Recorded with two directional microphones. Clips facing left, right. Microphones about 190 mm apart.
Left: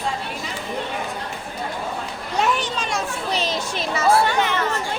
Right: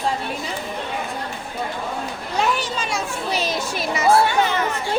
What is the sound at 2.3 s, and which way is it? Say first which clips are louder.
Speech: even; centre (ahead or behind).